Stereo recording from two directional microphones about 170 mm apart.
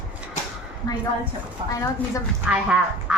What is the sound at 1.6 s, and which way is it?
Speech, 30° right (ahead or behind).